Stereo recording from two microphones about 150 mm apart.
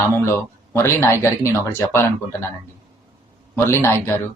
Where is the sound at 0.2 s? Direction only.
15° left (ahead or behind).